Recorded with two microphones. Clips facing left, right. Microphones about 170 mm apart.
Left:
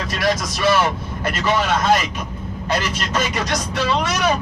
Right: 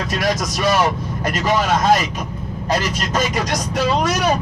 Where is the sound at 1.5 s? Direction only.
40° right (ahead or behind).